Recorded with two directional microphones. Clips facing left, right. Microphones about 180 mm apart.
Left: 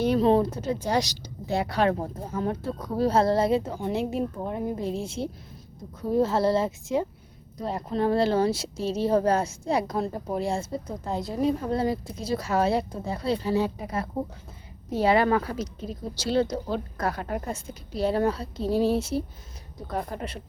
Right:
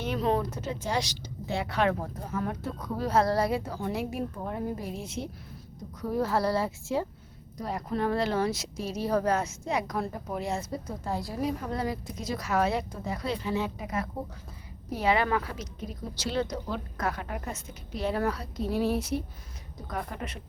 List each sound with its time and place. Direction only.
0.0 s a woman's voice: 35° left (ahead or behind)